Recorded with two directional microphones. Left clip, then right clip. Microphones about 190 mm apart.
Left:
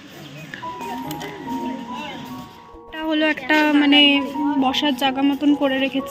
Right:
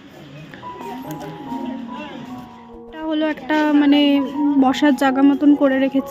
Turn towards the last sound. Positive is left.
turn(degrees=-25)  # may be behind; listen again after turning